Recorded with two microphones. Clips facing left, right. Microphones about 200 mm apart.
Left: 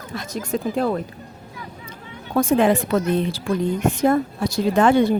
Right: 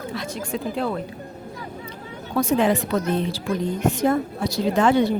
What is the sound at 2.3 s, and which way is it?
Speech, 50° left (ahead or behind).